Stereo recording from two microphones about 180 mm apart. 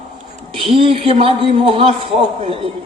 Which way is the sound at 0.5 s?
30° right (ahead or behind).